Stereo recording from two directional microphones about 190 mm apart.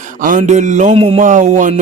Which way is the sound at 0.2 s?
40° right (ahead or behind).